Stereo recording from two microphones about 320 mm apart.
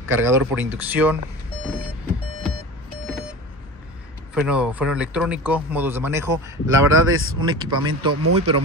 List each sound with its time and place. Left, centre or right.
0.1 s speech: centre
4.3 s speech: centre
6.9 s speech: right
7.3 s speech: centre
8.1 s speech: right